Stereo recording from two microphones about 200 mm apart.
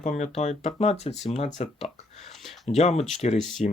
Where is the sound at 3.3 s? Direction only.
Centre (ahead or behind).